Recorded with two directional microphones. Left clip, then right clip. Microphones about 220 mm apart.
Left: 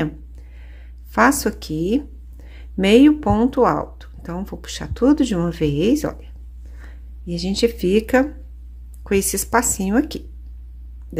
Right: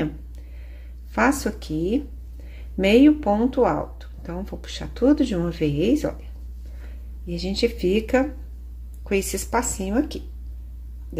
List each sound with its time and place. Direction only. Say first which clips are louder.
1.1 s speech: left 5 dB; 25° left (ahead or behind)